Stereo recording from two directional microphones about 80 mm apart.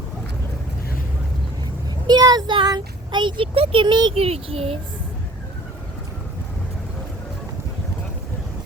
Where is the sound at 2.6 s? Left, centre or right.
Right.